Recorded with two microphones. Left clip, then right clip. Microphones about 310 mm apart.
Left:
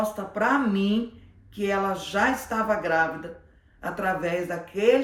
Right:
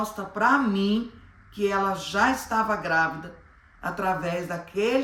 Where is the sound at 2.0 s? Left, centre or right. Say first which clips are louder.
Right 1 dB; centre.